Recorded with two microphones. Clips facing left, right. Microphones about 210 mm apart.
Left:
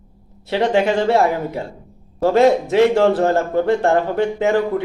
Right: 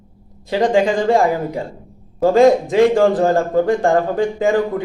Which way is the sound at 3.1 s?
15° right (ahead or behind).